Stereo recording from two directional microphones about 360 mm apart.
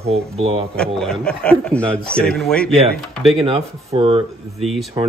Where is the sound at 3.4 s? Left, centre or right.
Centre.